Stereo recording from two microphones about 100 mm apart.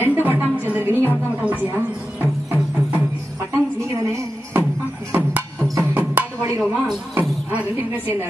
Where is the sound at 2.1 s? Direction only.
20° right (ahead or behind).